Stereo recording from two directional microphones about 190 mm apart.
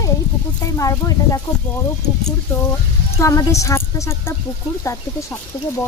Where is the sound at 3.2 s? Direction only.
15° left (ahead or behind).